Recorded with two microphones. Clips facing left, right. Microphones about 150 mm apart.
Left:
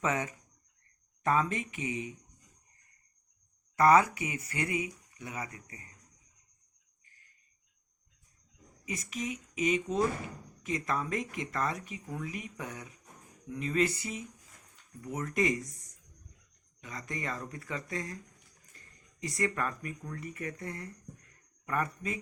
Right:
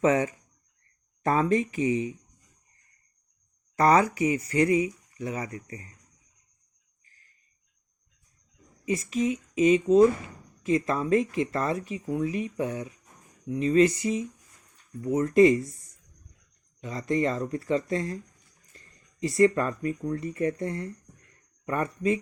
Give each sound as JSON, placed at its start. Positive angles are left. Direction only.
{"t": 0.0, "sound": "speech", "side_deg": -30}
{"t": 3.8, "sound": "speech", "side_deg": -30}
{"t": 8.9, "sound": "speech", "side_deg": -30}
{"t": 16.8, "sound": "speech", "side_deg": -30}